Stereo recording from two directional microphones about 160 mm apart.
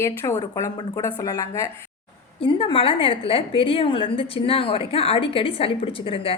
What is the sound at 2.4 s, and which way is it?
A woman's voice, 35° left (ahead or behind).